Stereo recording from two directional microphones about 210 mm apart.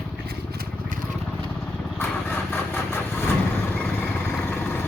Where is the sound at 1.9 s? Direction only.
10° left (ahead or behind).